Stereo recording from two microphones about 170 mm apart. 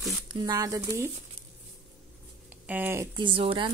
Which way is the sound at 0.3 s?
25° right (ahead or behind).